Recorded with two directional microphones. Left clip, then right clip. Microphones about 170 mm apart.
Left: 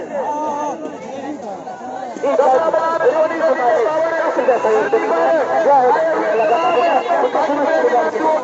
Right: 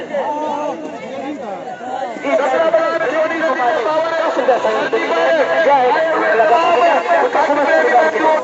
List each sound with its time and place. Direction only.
2.2 s chatter: 45° left (ahead or behind)
5.3 s speech: 45° left (ahead or behind)
6.1 s speech: 20° left (ahead or behind)
6.4 s speech: 10° right (ahead or behind)